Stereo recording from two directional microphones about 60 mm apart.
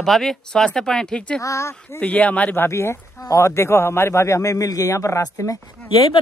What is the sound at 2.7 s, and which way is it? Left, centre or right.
Speech, left.